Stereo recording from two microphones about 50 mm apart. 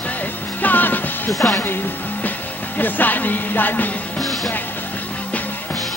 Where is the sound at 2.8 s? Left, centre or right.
Left.